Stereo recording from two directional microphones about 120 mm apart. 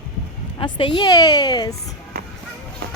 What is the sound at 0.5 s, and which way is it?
Speech, 40° left (ahead or behind).